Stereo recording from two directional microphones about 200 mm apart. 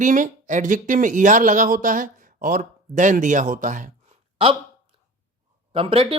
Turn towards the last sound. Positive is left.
turn(degrees=-30)  # may be behind; listen again after turning